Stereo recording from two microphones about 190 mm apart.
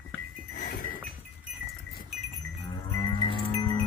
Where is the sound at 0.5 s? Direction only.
50° left (ahead or behind).